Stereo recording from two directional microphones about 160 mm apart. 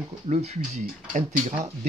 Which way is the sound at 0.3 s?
45° right (ahead or behind).